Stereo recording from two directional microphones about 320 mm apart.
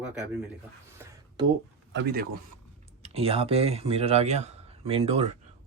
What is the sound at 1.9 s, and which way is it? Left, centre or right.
Speech, right.